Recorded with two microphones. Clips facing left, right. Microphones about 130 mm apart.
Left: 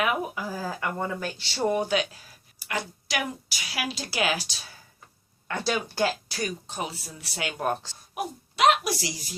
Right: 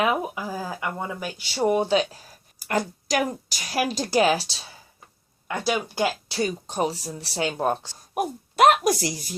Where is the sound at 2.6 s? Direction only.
45° right (ahead or behind).